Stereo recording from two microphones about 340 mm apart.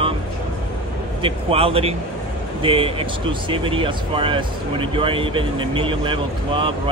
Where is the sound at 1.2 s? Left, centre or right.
Centre.